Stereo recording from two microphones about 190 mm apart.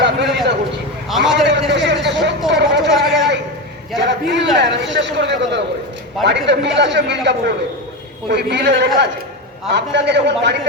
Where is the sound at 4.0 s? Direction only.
70° right (ahead or behind).